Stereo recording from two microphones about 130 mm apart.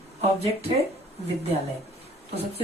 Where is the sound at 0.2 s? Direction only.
50° right (ahead or behind).